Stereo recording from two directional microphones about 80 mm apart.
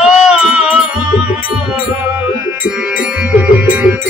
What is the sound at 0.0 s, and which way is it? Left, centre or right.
Music, centre.